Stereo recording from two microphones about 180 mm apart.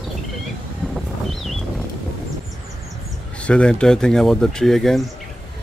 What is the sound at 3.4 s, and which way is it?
Speech, 5° left (ahead or behind).